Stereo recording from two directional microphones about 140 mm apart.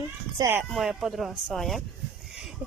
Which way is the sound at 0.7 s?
Centre (ahead or behind).